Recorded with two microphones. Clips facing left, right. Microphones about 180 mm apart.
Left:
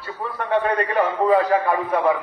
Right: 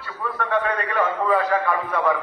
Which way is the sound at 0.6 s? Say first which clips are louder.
Left 4 dB; 30° left (ahead or behind).